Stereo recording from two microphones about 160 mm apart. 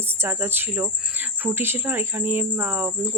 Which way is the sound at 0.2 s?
15° right (ahead or behind).